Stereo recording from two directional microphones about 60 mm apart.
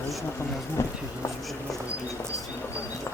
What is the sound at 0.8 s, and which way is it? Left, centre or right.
Speech, left.